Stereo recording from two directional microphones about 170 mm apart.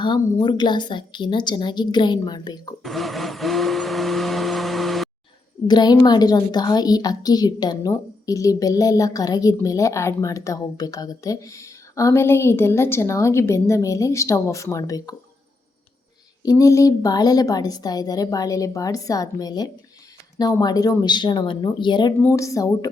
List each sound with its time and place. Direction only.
0.0 s a woman's voice: 25° left (ahead or behind)
2.8 s blender: centre (ahead or behind)
5.6 s a woman's voice: 25° left (ahead or behind)
16.4 s a woman's voice: 20° left (ahead or behind)
22.2 s a woman's voice: 15° left (ahead or behind)